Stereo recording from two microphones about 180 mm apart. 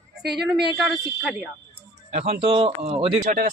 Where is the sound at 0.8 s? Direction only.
Centre (ahead or behind).